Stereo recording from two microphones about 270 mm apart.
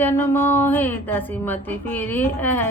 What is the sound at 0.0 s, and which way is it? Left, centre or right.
A woman's voice, centre.